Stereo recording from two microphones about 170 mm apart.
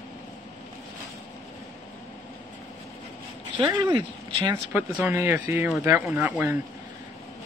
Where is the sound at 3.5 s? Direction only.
25° right (ahead or behind).